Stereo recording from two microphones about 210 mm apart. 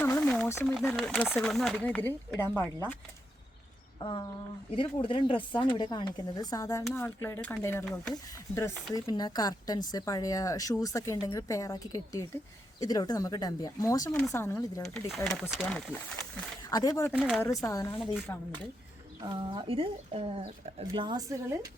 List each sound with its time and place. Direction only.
0.0 s a sound: 10° left (ahead or behind)
0.7 s speech: centre (ahead or behind)
4.0 s speech: 20° left (ahead or behind)
14.1 s speech: 5° left (ahead or behind)
14.9 s speech: 5° left (ahead or behind)
16.6 s speech: 15° left (ahead or behind)
17.1 s speech: centre (ahead or behind)
17.4 s speech: 15° left (ahead or behind)
18.0 s speech: centre (ahead or behind)
19.2 s speech: 25° right (ahead or behind)